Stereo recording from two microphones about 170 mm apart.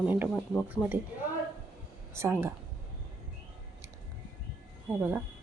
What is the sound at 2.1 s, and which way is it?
Speech, 15° right (ahead or behind).